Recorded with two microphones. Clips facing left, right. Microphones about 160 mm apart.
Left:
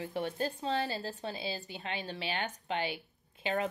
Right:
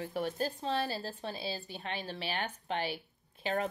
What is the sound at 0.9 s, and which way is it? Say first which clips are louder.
Speech: left 1 dB; 20° left (ahead or behind).